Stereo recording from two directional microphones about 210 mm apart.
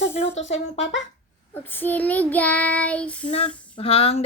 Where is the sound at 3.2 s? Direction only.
30° left (ahead or behind).